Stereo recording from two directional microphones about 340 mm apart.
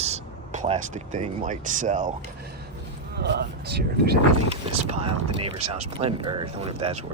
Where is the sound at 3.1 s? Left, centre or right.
Right.